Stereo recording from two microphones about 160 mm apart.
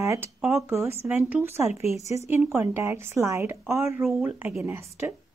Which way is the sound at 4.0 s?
Centre (ahead or behind).